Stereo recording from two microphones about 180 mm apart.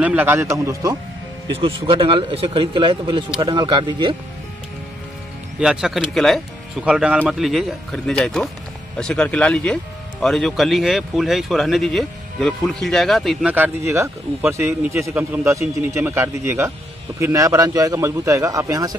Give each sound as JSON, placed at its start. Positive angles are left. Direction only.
{"t": 0.0, "sound": "a man's voice", "side_deg": -10}
{"t": 1.6, "sound": "speech", "side_deg": -30}
{"t": 5.6, "sound": "a man's voice", "side_deg": -5}